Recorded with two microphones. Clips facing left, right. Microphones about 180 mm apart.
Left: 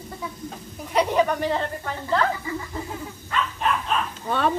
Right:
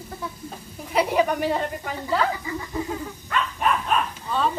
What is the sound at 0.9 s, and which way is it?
Speech, 10° right (ahead or behind).